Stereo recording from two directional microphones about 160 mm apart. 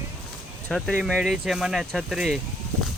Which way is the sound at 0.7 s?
Centre (ahead or behind).